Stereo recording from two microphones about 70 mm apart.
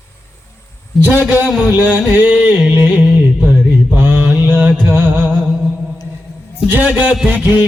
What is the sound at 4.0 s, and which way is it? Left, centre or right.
Mantra, right.